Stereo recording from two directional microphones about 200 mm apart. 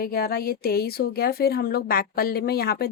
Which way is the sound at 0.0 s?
50° left (ahead or behind).